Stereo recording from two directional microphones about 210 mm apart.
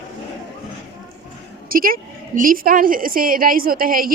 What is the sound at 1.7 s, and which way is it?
A woman's voice, 40° right (ahead or behind).